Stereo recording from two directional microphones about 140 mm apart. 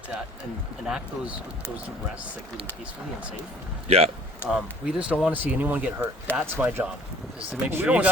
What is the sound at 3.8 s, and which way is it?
Speech, 50° right (ahead or behind).